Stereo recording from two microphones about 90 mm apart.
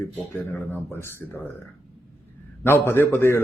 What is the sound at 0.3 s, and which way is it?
Speech, 25° left (ahead or behind).